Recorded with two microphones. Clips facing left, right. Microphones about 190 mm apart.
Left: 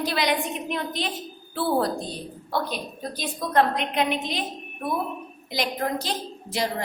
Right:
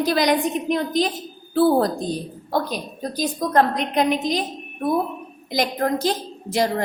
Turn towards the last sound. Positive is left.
turn(degrees=-50)  # may be behind; listen again after turning